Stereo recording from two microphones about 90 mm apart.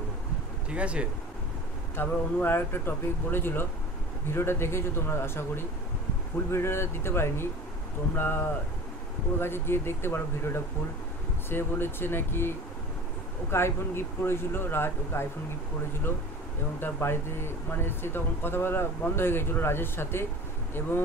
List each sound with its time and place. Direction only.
0.7 s speech: 15° right (ahead or behind)
2.0 s speech: 20° left (ahead or behind)
16.8 s speech: 25° left (ahead or behind)